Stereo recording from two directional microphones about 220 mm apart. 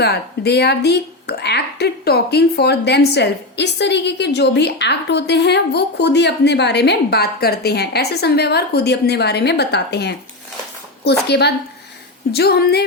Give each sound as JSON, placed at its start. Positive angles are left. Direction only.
{"t": 0.0, "sound": "speech", "side_deg": 45}